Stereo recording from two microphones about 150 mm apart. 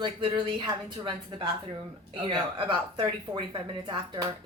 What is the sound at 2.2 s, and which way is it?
A woman's voice, 35° right (ahead or behind).